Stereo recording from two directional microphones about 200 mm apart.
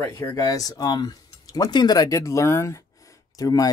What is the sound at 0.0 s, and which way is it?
Speech, 15° left (ahead or behind).